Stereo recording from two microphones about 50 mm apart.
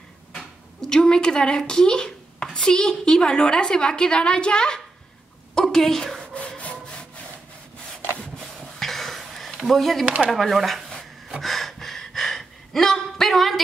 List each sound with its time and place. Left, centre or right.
0.4 s speech: centre
5.5 s a sound: centre
6.6 s sawing: left
8.7 s a sound: centre
10.0 s speech: right
10.3 s speech: centre
11.4 s gasp: centre